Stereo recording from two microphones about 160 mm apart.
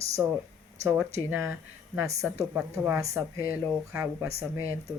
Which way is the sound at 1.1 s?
15° right (ahead or behind).